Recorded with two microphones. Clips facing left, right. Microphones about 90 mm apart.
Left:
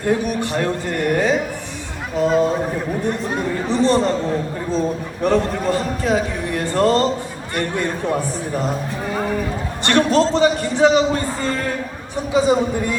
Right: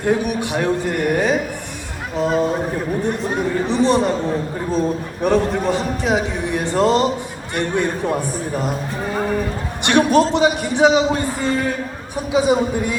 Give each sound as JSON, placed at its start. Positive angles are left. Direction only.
{"t": 0.0, "sound": "a man's voice", "side_deg": -10}
{"t": 3.7, "sound": "a man's voice", "side_deg": -15}
{"t": 9.8, "sound": "a man's voice", "side_deg": -15}